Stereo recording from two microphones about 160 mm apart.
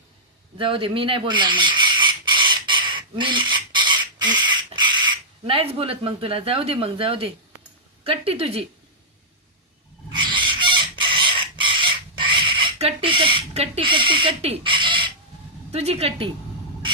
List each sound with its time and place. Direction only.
0.6 s chicken: 35° right (ahead or behind)
8.0 s speech: 35° right (ahead or behind)
10.2 s chicken: 30° right (ahead or behind)
15.7 s speech: 40° right (ahead or behind)